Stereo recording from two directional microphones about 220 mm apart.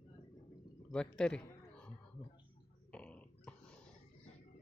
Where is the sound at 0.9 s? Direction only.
5° left (ahead or behind).